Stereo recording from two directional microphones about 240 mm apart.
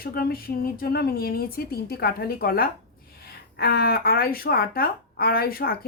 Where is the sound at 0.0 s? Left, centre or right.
Left.